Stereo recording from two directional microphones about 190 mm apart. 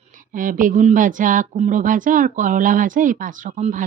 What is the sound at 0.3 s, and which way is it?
Speech, 45° right (ahead or behind).